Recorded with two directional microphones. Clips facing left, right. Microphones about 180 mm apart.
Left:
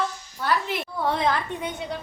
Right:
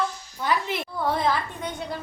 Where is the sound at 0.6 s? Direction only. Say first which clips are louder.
Even; 5° left (ahead or behind).